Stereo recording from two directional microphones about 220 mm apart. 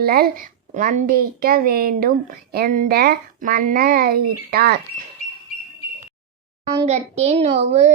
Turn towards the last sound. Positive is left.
turn(degrees=-30)  # may be behind; listen again after turning